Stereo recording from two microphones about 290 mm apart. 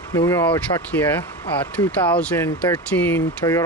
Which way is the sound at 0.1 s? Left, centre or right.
Centre.